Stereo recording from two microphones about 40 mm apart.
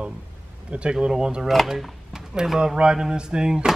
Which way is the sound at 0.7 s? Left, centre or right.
Right.